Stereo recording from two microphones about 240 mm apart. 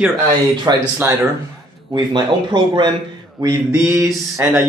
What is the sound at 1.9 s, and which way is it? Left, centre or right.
Speech, centre.